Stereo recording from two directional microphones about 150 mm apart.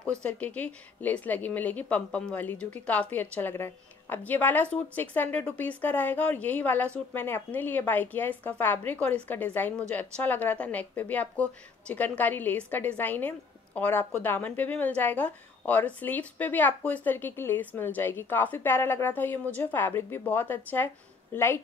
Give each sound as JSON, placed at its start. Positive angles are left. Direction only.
{"t": 0.2, "sound": "speech", "side_deg": 10}